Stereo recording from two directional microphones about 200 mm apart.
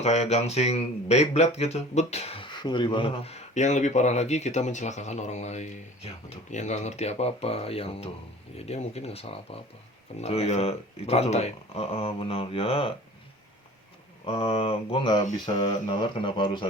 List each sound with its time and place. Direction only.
0.0 s speech: 35° left (ahead or behind)
14.3 s speech: 30° left (ahead or behind)